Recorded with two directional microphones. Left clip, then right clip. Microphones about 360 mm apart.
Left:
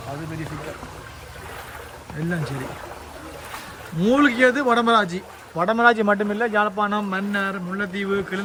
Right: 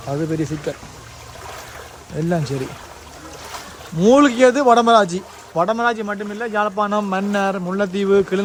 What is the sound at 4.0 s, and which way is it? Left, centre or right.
Speech, centre.